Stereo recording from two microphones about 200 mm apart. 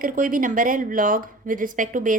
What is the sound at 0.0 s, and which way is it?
A woman's voice, 45° right (ahead or behind).